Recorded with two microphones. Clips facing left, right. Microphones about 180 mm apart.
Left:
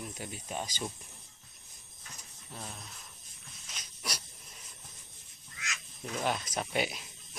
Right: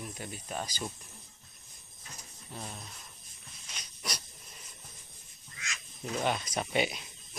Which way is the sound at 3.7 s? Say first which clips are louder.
Right 1 dB; 5° left (ahead or behind).